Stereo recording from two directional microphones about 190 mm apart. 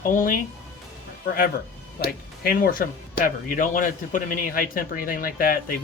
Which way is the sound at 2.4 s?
50° left (ahead or behind).